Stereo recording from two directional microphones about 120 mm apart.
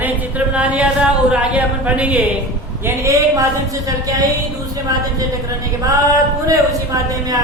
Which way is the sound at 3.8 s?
30° right (ahead or behind).